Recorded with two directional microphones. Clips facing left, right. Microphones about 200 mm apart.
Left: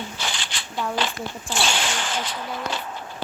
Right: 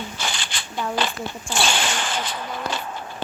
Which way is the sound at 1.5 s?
50° right (ahead or behind).